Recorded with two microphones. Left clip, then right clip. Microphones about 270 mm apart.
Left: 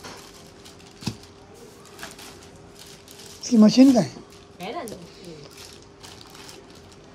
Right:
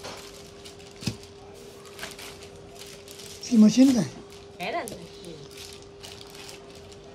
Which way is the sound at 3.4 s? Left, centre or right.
Centre.